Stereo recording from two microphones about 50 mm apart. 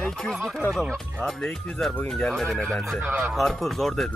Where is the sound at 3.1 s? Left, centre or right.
Right.